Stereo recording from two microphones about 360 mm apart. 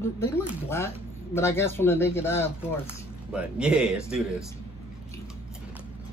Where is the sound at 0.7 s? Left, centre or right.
Centre.